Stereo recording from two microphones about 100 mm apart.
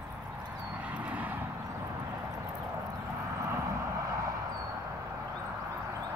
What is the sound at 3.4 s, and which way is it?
Vehicle, 30° right (ahead or behind).